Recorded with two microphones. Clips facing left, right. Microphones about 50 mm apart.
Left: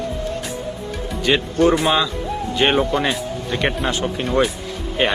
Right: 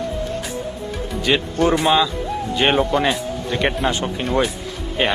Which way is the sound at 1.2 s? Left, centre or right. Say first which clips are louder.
Left 2 dB; centre.